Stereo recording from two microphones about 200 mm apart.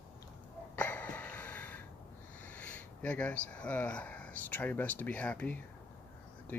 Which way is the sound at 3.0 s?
5° left (ahead or behind).